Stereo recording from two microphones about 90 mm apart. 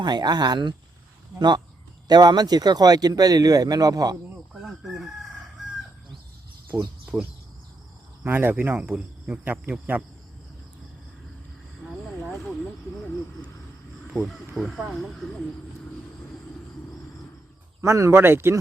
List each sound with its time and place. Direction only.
0.0 s speech: 50° right (ahead or behind)
4.6 s chicken: 5° right (ahead or behind)
7.0 s a sound: 10° right (ahead or behind)
8.2 s speech: 20° right (ahead or behind)
11.9 s vehicle: centre (ahead or behind)
14.5 s speech: centre (ahead or behind)
17.7 s speech: 35° right (ahead or behind)